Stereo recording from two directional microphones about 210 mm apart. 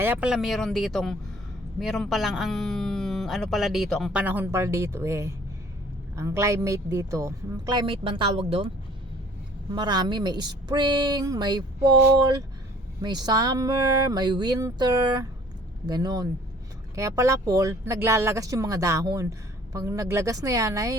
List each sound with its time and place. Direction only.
0.0 s speech: 10° right (ahead or behind); by 8.7 s 25° right (ahead or behind)
9.7 s speech: 20° right (ahead or behind)